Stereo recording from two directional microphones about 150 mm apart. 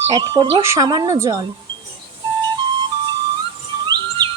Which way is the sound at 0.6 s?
15° right (ahead or behind).